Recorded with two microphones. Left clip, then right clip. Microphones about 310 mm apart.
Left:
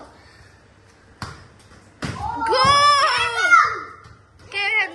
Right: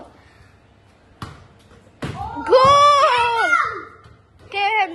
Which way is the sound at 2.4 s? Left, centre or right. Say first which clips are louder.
Right 4 dB; centre.